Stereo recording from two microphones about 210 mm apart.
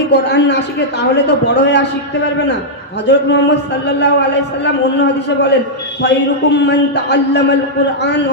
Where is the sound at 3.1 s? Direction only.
55° left (ahead or behind).